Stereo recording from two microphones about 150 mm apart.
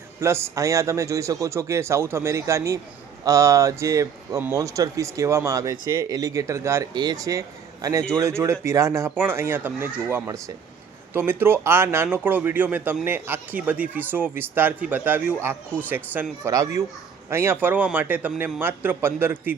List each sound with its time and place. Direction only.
0.2 s a man's voice: 15° right (ahead or behind)